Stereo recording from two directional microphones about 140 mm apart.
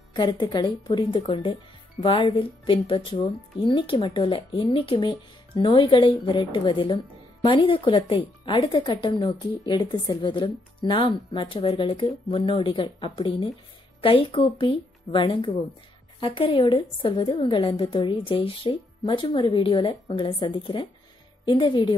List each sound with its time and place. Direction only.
0.1 s speech: 30° left (ahead or behind)